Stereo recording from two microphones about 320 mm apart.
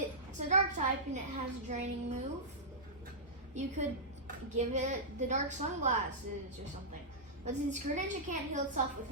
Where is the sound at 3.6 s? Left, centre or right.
Right.